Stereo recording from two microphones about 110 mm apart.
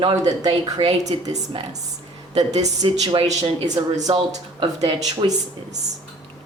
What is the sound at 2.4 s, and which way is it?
Speech, 85° right.